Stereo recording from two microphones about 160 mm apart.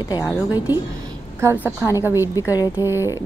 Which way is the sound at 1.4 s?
15° right (ahead or behind).